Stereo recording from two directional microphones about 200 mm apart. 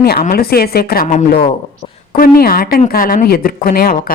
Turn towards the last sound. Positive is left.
turn(degrees=45)  # may be behind; listen again after turning